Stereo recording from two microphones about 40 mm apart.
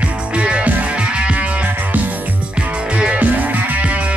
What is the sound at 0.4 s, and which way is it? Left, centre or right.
Music, right.